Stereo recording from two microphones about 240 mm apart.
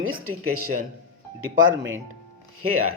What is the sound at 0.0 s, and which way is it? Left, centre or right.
Speech, right.